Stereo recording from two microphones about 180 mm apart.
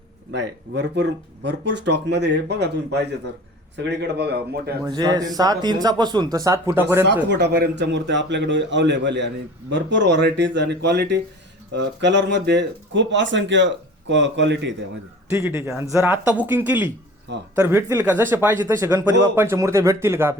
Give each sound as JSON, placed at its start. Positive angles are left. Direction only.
{"t": 0.3, "sound": "a man's voice", "side_deg": -70}
{"t": 4.9, "sound": "speech", "side_deg": -20}
{"t": 7.3, "sound": "a man's voice", "side_deg": -70}
{"t": 15.3, "sound": "speech", "side_deg": -15}